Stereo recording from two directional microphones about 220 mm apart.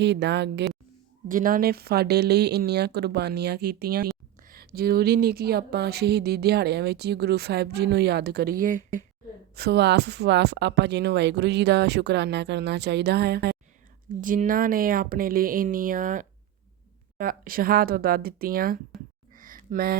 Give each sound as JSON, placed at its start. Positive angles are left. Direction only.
{"t": 0.0, "sound": "speech", "side_deg": -50}
{"t": 1.3, "sound": "speech", "side_deg": -40}
{"t": 9.6, "sound": "speech", "side_deg": -50}
{"t": 19.3, "sound": "a sound", "side_deg": -40}